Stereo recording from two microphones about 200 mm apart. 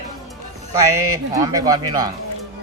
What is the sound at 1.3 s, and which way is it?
Speech, 20° right (ahead or behind).